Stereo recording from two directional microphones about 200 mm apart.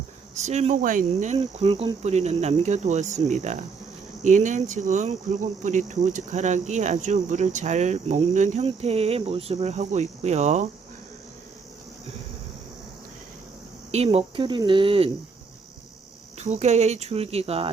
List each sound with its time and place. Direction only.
0.4 s speech: 35° right (ahead or behind)
1.5 s speech: 30° right (ahead or behind)
13.9 s speech: 30° right (ahead or behind)
16.4 s speech: 35° right (ahead or behind)